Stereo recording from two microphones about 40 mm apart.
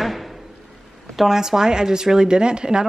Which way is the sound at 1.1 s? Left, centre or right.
Centre.